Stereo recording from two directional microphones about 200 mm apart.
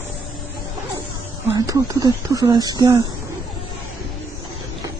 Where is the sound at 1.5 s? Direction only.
20° right (ahead or behind).